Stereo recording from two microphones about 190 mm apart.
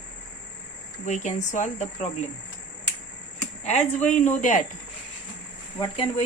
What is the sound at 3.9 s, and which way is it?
Speech, 40° left (ahead or behind).